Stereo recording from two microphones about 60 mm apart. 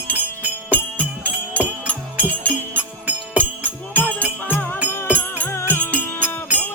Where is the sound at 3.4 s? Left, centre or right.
Right.